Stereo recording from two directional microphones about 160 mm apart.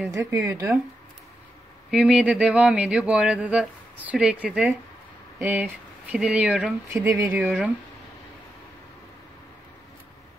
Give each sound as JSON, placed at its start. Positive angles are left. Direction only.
{"t": 0.1, "sound": "speech", "side_deg": -20}
{"t": 1.9, "sound": "speech", "side_deg": -5}